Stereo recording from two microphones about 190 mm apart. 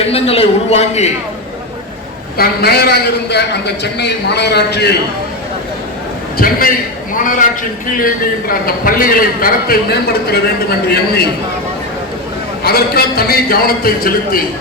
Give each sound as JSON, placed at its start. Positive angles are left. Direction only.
{"t": 0.0, "sound": "a man's voice", "side_deg": 30}
{"t": 2.4, "sound": "a man's voice", "side_deg": 55}
{"t": 6.3, "sound": "a man's voice", "side_deg": 50}
{"t": 12.6, "sound": "a man's voice", "side_deg": 55}